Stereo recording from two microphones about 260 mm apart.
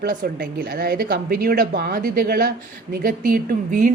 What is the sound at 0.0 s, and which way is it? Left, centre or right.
A woman's voice, right.